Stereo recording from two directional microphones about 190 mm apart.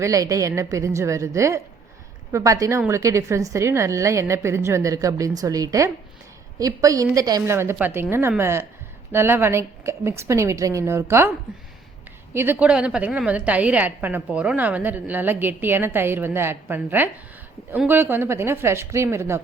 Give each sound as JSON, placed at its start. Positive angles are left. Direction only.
{"t": 0.0, "sound": "a woman's voice", "side_deg": -15}
{"t": 12.3, "sound": "a woman's voice", "side_deg": -10}